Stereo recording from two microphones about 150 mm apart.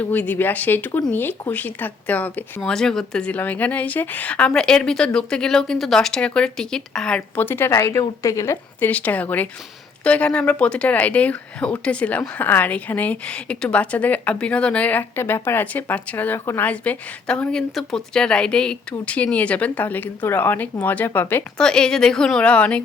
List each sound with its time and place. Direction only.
0.0 s speech: 10° left (ahead or behind)